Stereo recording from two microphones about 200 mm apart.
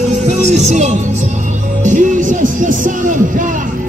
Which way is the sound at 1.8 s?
40° right (ahead or behind).